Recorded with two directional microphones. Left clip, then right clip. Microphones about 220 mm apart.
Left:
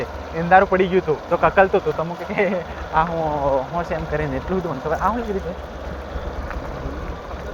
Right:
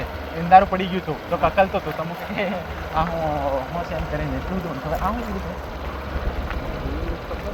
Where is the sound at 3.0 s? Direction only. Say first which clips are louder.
Left 4 dB; 45° left (ahead or behind).